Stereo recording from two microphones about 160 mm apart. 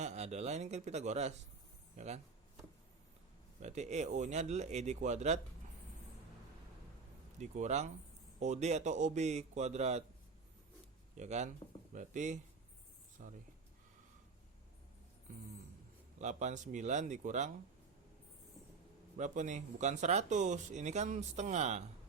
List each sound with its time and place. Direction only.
0.0 s speech: 45° right (ahead or behind)
3.6 s speech: 45° right (ahead or behind)
7.3 s speech: 45° right (ahead or behind)
11.2 s speech: 45° right (ahead or behind)
16.1 s speech: 50° right (ahead or behind)
19.1 s speech: 50° right (ahead or behind)